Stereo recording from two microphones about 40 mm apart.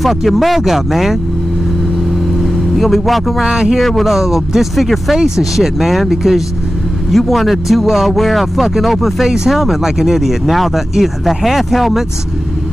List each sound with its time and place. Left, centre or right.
0.0 s speech: centre
2.4 s speech: centre
3.4 s speech: centre
4.0 s speech: centre
5.1 s speech: centre